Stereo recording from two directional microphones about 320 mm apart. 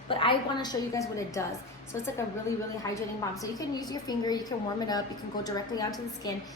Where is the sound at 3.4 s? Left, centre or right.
Centre.